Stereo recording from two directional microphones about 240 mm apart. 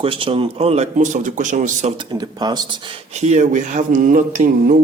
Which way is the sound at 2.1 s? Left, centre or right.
Centre.